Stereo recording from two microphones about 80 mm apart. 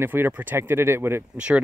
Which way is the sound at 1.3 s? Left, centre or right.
Centre.